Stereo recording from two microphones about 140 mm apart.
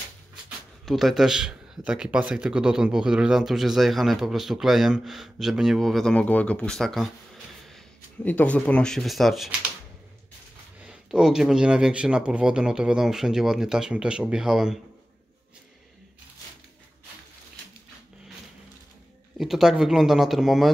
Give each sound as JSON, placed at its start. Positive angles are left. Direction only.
{"t": 0.8, "sound": "a man's voice", "side_deg": 0}
{"t": 10.8, "sound": "a man's voice", "side_deg": -5}
{"t": 19.3, "sound": "a man's voice", "side_deg": 0}